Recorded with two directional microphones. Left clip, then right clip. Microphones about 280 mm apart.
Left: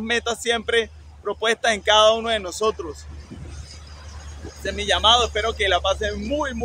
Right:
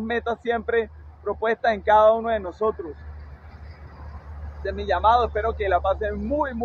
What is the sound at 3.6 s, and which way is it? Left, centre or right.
Vehicle, left.